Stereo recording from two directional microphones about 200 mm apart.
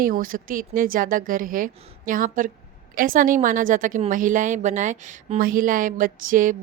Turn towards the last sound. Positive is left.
turn(degrees=-45)  # may be behind; listen again after turning